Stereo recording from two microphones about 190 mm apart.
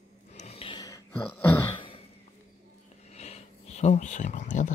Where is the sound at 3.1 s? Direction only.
35° left (ahead or behind).